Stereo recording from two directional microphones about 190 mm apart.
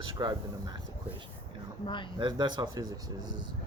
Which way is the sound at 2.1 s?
20° right (ahead or behind).